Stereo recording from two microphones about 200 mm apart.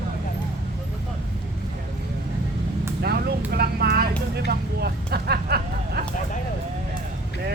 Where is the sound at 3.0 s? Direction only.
50° right (ahead or behind).